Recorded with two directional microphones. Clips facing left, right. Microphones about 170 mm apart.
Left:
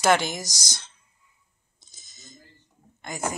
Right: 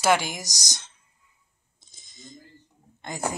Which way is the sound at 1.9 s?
25° right (ahead or behind).